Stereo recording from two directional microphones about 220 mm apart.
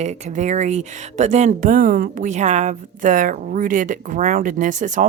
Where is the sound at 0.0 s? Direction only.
30° right (ahead or behind).